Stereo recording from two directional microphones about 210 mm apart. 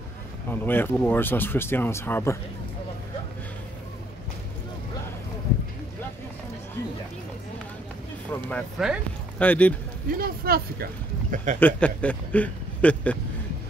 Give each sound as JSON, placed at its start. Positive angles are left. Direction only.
{"t": 0.5, "sound": "speech", "side_deg": 10}
{"t": 8.3, "sound": "speech", "side_deg": 5}
{"t": 10.1, "sound": "speech", "side_deg": -45}
{"t": 11.6, "sound": "speech", "side_deg": 5}